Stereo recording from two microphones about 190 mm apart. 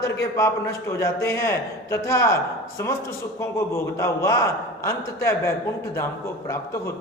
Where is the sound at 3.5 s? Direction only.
15° left (ahead or behind).